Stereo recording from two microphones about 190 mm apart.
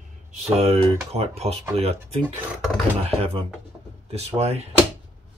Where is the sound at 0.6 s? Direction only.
35° right (ahead or behind).